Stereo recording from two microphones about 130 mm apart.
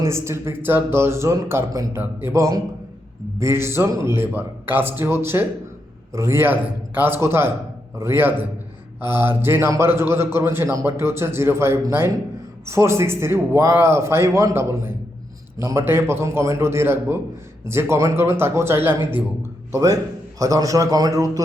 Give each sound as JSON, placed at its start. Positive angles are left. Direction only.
{"t": 0.0, "sound": "a man's voice", "side_deg": -20}